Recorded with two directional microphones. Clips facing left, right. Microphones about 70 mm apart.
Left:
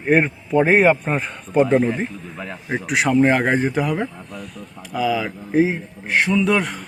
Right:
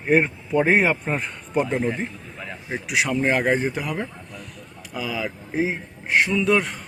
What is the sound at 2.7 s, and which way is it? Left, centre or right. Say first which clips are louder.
Speech: left 4 dB; left.